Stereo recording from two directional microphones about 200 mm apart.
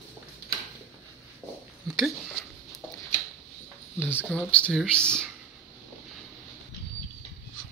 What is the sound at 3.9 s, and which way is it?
Speech, 10° left (ahead or behind).